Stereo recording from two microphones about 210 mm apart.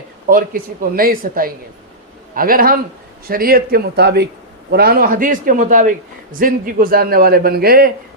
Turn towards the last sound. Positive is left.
turn(degrees=-45)  # may be behind; listen again after turning